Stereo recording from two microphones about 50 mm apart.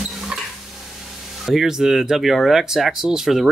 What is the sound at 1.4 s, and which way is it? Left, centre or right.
Speech, centre.